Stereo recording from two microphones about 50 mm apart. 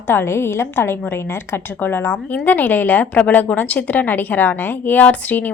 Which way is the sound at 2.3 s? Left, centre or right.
Left.